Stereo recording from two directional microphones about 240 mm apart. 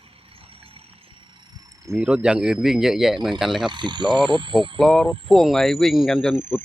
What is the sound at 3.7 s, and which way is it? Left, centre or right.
Speech, centre.